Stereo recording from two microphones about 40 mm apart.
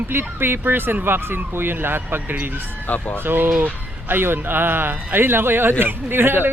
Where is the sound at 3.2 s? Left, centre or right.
Right.